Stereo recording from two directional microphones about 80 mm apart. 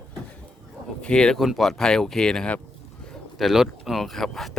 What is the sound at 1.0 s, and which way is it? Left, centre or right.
Speech, centre.